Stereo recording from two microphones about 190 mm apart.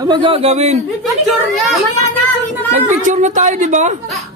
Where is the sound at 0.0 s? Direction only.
25° right (ahead or behind).